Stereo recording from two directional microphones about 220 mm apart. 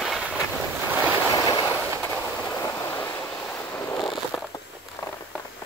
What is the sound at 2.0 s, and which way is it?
Train, 10° left (ahead or behind).